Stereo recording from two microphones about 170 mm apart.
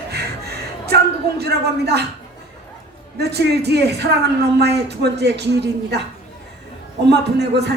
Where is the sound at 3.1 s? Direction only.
75° right (ahead or behind).